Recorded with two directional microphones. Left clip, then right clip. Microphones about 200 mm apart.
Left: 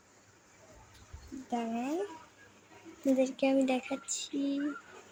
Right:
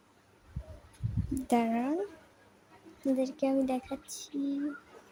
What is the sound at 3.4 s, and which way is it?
Speech, 10° right (ahead or behind).